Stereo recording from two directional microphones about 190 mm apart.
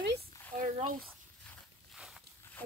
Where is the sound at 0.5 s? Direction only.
45° right (ahead or behind).